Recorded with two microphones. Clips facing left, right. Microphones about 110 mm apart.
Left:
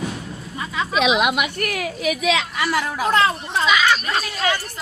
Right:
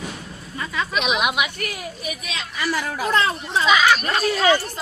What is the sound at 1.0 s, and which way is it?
Speech, 90° left.